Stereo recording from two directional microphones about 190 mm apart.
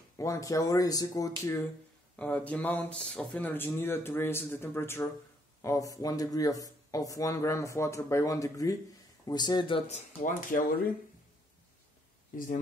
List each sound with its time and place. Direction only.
0.2 s speech: 15° left (ahead or behind); by 10.9 s 45° left (ahead or behind)
12.3 s speech: 45° left (ahead or behind)